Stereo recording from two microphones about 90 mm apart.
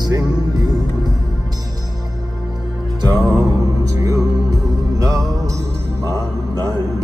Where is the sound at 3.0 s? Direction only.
55° right (ahead or behind).